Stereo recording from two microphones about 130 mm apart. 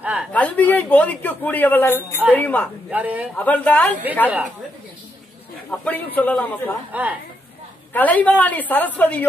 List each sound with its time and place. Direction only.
0.0 s a man's voice: 10° right (ahead or behind)
0.3 s a woman's voice: 10° left (ahead or behind)
2.9 s a man's voice: 10° right (ahead or behind)
3.3 s a woman's voice: 10° left (ahead or behind)
5.7 s a woman's voice: 10° left (ahead or behind)
6.9 s a man's voice: 10° right (ahead or behind)
7.9 s a woman's voice: 10° left (ahead or behind)